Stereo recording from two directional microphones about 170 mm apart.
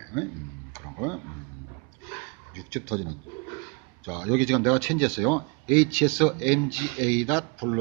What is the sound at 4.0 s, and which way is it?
Speech, 5° left (ahead or behind).